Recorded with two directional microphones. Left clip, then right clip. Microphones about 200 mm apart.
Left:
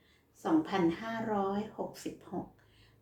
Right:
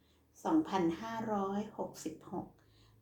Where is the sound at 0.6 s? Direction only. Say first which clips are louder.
Left 3 dB; 50° left (ahead or behind).